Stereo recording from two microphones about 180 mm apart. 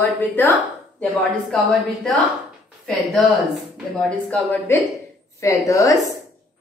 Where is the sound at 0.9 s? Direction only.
10° left (ahead or behind).